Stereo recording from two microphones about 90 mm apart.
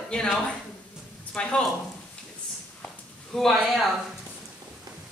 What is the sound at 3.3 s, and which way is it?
Speech, 5° left (ahead or behind).